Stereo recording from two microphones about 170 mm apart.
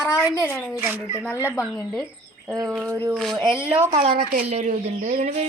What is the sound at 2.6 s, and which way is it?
Speech, 20° right (ahead or behind).